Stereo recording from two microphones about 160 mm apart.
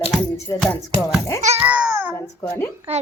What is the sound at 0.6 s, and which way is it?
Speech, 5° left (ahead or behind).